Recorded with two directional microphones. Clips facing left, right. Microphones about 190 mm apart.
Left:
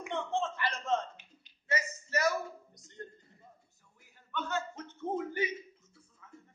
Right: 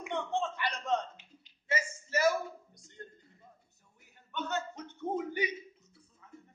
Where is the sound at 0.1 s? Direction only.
15° right (ahead or behind).